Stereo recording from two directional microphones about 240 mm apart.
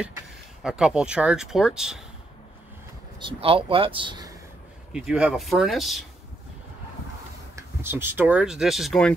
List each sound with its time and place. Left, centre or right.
0.0 s speech: centre
3.2 s speech: right
4.9 s speech: centre
7.5 s speech: centre